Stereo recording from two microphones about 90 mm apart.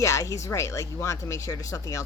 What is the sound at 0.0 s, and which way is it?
Speech, 35° left (ahead or behind).